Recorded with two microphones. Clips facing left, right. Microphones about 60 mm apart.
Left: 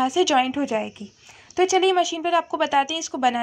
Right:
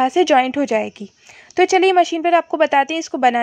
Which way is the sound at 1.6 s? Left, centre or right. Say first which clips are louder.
Right 6 dB; right.